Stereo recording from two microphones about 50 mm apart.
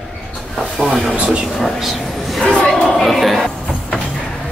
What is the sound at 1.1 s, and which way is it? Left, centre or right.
Speech, right.